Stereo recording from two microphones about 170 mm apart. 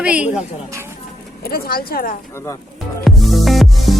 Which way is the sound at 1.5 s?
60° left (ahead or behind).